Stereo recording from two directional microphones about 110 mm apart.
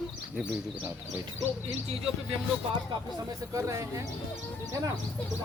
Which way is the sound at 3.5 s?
25° right (ahead or behind).